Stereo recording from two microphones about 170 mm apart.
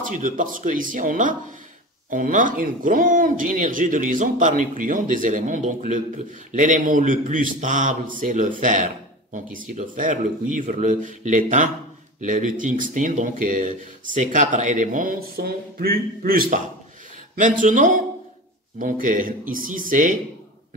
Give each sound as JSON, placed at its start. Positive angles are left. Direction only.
{"t": 0.2, "sound": "speech", "side_deg": -50}